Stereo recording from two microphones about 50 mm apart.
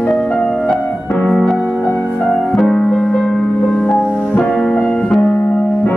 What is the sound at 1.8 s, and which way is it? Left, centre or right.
Music, left.